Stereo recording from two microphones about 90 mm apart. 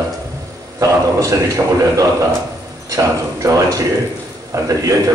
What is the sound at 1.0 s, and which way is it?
Speech, 40° right (ahead or behind).